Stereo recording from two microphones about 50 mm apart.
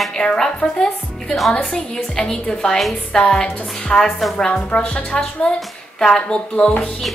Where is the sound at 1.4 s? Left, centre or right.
Centre.